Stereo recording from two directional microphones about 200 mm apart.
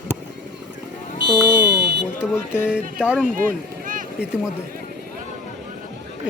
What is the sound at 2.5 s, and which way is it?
Speech, 5° right (ahead or behind).